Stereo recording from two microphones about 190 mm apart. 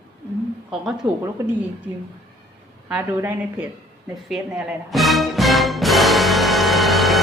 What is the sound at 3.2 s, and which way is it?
Speech, 10° right (ahead or behind).